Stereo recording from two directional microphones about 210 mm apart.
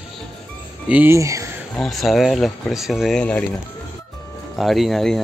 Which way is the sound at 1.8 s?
Centre (ahead or behind).